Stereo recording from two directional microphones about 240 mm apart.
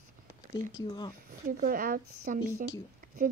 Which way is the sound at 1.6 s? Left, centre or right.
Right.